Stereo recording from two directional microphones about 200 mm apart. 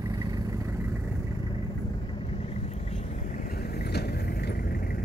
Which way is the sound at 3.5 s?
50° left (ahead or behind).